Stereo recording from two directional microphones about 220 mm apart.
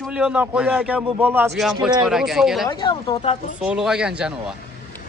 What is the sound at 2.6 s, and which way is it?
Speech, 20° left (ahead or behind).